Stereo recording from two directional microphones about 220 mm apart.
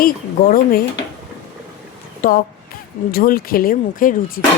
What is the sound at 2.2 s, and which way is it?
A woman's voice, 40° left (ahead or behind).